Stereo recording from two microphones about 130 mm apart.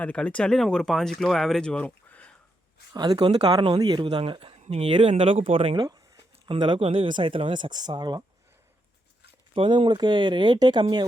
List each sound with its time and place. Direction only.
0.0 s speech: 10° left (ahead or behind)
2.9 s speech: 30° right (ahead or behind)
3.2 s speech: 40° right (ahead or behind)
4.6 s speech: 55° right (ahead or behind)
4.9 s speech: 40° right (ahead or behind)
9.6 s speech: 40° right (ahead or behind)